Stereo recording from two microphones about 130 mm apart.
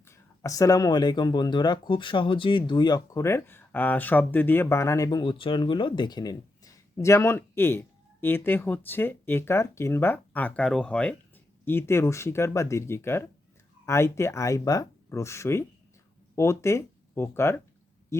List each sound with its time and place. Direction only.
0.0 s speech: 25° left (ahead or behind)
5.2 s speech: 40° left (ahead or behind); by 11.1 s 5° left (ahead or behind)
11.6 s speech: 15° left (ahead or behind)